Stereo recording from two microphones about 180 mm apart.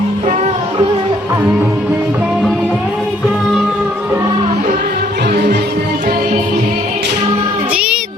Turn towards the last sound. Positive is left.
turn(degrees=-50)  # may be behind; listen again after turning